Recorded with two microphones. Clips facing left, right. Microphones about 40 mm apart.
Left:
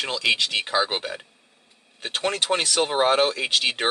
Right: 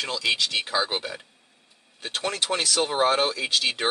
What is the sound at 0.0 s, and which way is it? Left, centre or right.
Speech, left.